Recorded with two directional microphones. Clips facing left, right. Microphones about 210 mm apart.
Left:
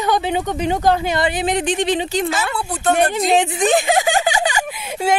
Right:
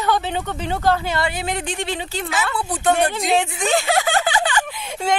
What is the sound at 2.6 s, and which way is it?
Speech, 15° right (ahead or behind).